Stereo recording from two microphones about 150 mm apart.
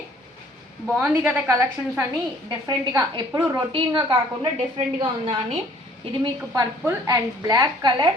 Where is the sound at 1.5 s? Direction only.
20° right (ahead or behind).